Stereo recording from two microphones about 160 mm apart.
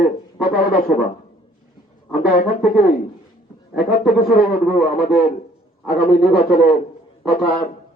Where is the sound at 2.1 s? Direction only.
65° left (ahead or behind).